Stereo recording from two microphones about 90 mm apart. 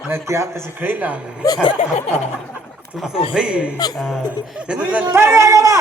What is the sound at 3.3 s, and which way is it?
Speech, 10° right (ahead or behind).